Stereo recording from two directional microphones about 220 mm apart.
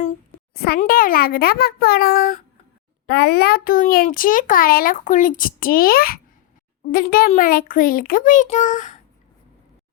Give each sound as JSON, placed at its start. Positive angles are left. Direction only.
{"t": 0.5, "sound": "a child's voice", "side_deg": 45}